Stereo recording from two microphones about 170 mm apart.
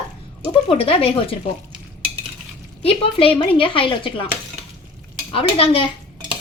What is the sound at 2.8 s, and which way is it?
A woman's voice, 35° left (ahead or behind).